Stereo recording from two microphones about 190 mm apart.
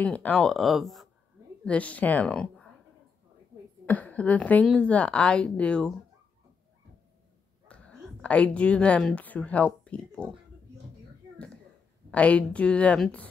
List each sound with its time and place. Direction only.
0.0 s a woman's voice: 5° left (ahead or behind)
3.8 s speech: 10° left (ahead or behind)
7.6 s a woman's voice: 5° left (ahead or behind)
12.1 s a woman's voice: 5° left (ahead or behind)